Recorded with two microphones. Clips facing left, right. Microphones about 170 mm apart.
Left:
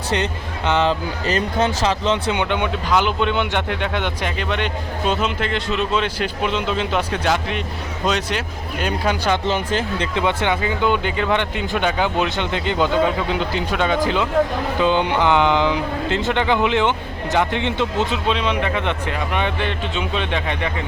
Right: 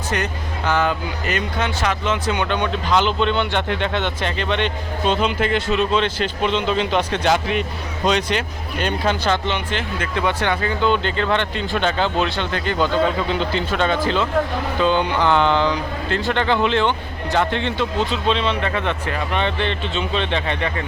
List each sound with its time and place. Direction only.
0.6 s speech: 25° left (ahead or behind)
2.4 s speech: 15° left (ahead or behind)
5.4 s speech: 5° right (ahead or behind)
9.5 s speech: 40° left (ahead or behind)
10.2 s speech: 20° left (ahead or behind)
13.0 s speech: 5° left (ahead or behind)